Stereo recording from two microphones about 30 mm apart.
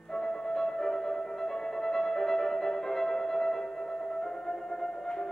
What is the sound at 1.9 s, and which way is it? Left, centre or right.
Music, centre.